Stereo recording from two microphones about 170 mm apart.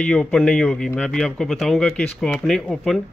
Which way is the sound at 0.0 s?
5° left (ahead or behind).